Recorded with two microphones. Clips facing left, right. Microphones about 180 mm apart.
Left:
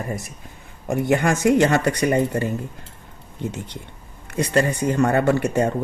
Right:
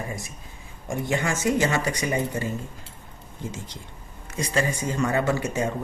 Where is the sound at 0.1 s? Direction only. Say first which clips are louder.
Left 6 dB; 65° left (ahead or behind).